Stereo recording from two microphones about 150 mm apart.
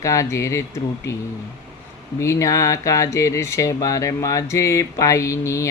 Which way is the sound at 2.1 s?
20° left (ahead or behind).